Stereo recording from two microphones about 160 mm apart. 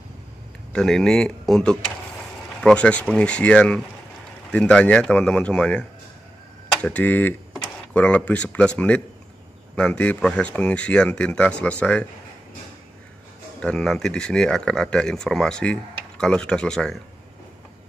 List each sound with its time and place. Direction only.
0.7 s speech: 5° left (ahead or behind)
13.6 s speech: 5° left (ahead or behind)